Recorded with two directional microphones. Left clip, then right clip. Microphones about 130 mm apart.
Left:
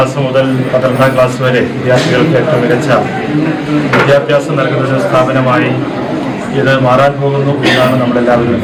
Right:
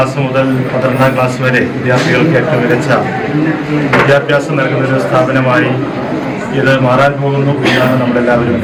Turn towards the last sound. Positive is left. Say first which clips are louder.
# left 1 dB
turn(degrees=-5)  # may be behind; listen again after turning